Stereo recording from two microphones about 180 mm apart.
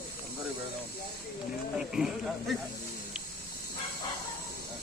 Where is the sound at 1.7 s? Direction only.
5° right (ahead or behind).